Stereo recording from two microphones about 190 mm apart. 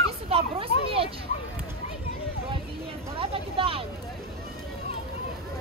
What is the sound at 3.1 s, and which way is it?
Vehicle, 30° right (ahead or behind).